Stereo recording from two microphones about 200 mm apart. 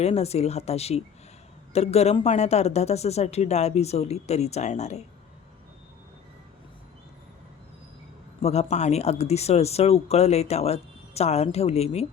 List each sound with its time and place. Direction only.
0.0 s speech: 30° left (ahead or behind)
8.4 s speech: 30° left (ahead or behind)